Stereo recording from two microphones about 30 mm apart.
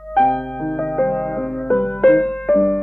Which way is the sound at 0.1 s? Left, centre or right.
Centre.